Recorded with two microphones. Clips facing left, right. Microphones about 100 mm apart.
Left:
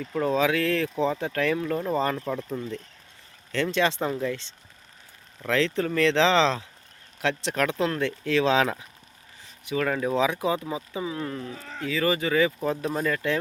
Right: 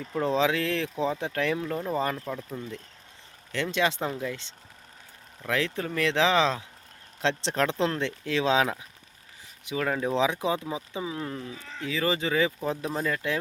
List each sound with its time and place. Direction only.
0.0 s speech: 15° right (ahead or behind)
2.1 s speech: 10° left (ahead or behind)
3.5 s speech: 15° right (ahead or behind)
5.5 s speech: 10° right (ahead or behind)
7.2 s speech: 25° right (ahead or behind)
11.4 s speech: 45° left (ahead or behind)
11.9 s speech: 20° right (ahead or behind)